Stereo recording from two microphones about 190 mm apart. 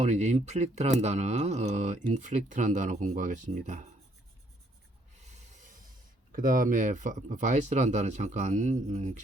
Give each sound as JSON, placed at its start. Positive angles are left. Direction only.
{"t": 0.0, "sound": "speech", "side_deg": -35}
{"t": 5.1, "sound": "rub", "side_deg": -40}
{"t": 6.3, "sound": "speech", "side_deg": -45}